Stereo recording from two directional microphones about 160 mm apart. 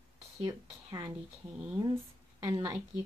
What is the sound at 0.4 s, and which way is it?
Speech, 20° right (ahead or behind).